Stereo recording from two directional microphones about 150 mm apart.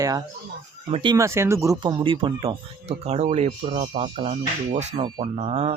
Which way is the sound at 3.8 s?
35° right (ahead or behind).